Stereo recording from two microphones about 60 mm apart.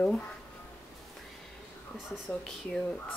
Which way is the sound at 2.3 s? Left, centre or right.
Centre.